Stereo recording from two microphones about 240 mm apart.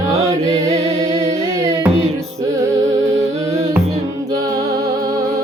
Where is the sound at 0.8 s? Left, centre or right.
Right.